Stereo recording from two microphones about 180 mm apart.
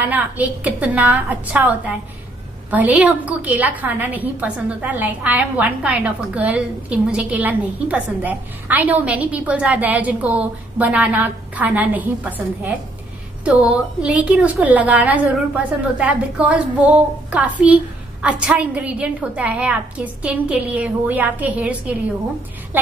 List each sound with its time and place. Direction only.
0.0 s a woman's voice: 10° right (ahead or behind)